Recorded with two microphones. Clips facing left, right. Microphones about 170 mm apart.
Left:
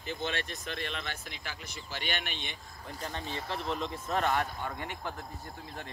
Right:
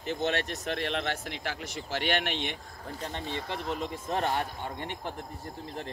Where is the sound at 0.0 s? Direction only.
65° right (ahead or behind).